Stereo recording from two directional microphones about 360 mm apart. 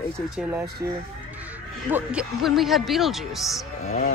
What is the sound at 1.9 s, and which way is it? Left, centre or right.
Speech, centre.